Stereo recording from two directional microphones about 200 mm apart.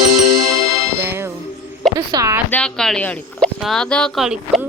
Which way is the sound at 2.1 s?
20° right (ahead or behind).